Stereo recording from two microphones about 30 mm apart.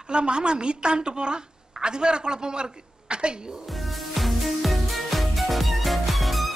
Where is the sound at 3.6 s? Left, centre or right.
Centre.